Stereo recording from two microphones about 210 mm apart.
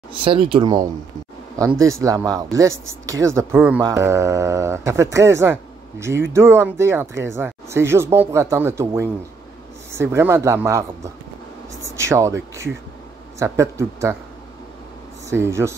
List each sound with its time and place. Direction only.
0.1 s speech: 25° right (ahead or behind)
15.2 s speech: 10° right (ahead or behind)